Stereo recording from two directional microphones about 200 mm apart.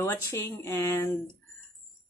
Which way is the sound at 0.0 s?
15° left (ahead or behind).